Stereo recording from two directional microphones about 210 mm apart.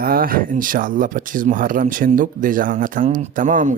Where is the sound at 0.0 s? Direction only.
45° right (ahead or behind).